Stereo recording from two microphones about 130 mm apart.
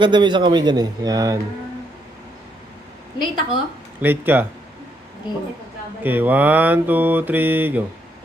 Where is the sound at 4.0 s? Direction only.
15° right (ahead or behind).